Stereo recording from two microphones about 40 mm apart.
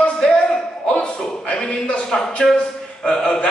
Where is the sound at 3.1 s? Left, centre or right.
Centre.